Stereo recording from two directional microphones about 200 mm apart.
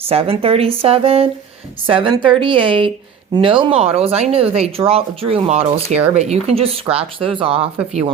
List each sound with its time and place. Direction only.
0.1 s speech: 30° right (ahead or behind)